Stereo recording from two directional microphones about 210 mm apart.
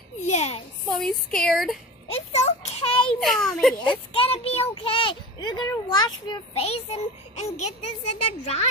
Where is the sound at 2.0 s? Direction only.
30° left (ahead or behind).